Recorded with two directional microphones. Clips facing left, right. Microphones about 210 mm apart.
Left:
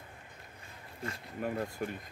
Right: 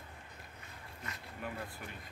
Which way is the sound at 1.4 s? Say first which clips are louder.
Left 9 dB; 45° left (ahead or behind).